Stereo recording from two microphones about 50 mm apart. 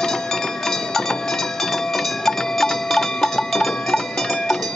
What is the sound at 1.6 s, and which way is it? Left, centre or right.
Music, centre.